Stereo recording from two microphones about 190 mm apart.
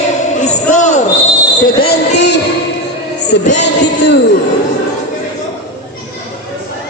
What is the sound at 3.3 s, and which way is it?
Music, 65° left (ahead or behind).